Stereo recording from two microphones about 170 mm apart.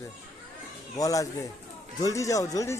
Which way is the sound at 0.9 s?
20° left (ahead or behind).